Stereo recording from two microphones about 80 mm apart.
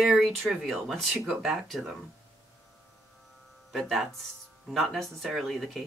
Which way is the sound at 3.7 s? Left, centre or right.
Centre.